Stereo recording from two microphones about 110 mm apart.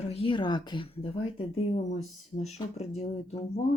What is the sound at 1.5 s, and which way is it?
Speech, 80° left.